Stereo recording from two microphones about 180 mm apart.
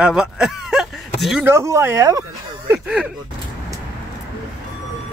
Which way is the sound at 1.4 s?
15° right (ahead or behind).